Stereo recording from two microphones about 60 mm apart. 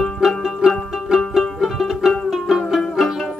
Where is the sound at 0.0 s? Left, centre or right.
Centre.